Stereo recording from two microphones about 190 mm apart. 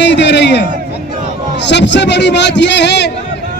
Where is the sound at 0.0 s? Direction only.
65° left (ahead or behind).